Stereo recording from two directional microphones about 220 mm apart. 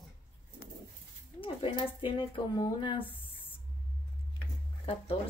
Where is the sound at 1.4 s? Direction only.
25° left (ahead or behind).